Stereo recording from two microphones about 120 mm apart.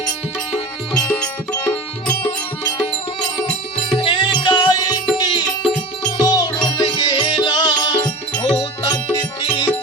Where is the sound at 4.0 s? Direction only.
40° left (ahead or behind).